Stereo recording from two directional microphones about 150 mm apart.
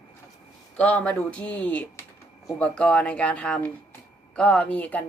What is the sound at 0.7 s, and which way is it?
A woman's voice, 10° left (ahead or behind).